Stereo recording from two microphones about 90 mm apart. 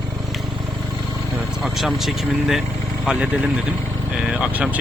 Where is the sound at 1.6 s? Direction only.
Centre (ahead or behind).